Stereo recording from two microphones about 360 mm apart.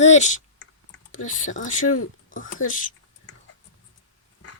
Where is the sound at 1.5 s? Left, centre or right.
Left.